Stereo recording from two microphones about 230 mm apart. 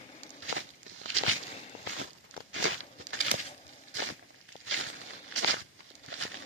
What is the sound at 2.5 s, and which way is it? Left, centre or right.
Crumpling, right.